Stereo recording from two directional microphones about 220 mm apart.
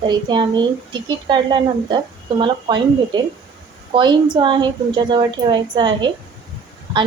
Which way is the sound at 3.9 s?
20° right (ahead or behind).